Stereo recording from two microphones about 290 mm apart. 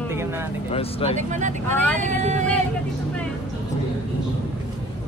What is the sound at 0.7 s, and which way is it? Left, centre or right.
Speech, centre.